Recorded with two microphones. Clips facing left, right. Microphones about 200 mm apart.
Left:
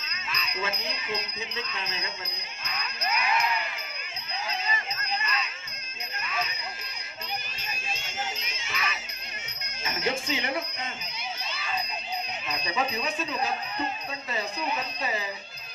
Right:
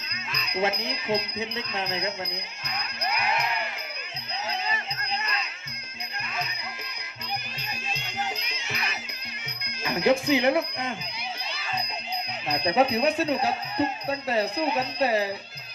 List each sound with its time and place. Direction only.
0.5 s speech: 65° right (ahead or behind)
2.6 s music: 35° right (ahead or behind)
3.2 s music: 60° right (ahead or behind)
7.9 s music: 65° right (ahead or behind)
9.6 s speech: 65° right (ahead or behind)
12.5 s speech: 65° right (ahead or behind)